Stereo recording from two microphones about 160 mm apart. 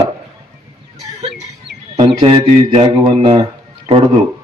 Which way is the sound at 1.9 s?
30° right (ahead or behind).